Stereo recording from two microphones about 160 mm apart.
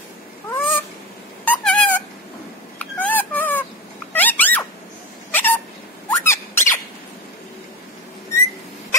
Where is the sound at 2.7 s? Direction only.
10° left (ahead or behind).